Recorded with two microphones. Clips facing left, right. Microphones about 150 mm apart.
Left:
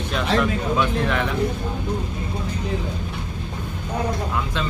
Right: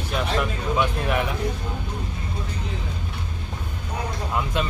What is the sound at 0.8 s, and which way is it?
Speech, 10° right (ahead or behind).